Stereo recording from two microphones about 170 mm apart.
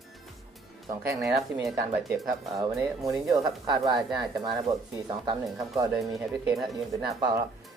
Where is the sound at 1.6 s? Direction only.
Centre (ahead or behind).